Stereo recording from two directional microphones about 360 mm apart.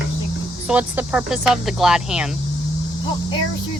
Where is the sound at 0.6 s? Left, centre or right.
Centre.